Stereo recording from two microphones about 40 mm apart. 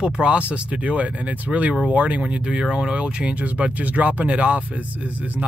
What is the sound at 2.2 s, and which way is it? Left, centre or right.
Speech, right.